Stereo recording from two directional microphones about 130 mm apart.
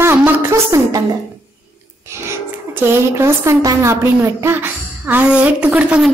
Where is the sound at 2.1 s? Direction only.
20° right (ahead or behind).